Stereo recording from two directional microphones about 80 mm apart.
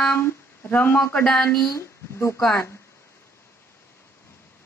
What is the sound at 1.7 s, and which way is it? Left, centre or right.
Speech, left.